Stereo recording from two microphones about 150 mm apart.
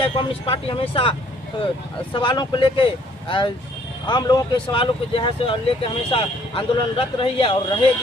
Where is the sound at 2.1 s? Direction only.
30° left (ahead or behind).